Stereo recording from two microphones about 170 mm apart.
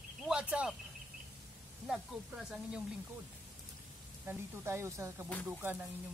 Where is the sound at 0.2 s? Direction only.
5° right (ahead or behind).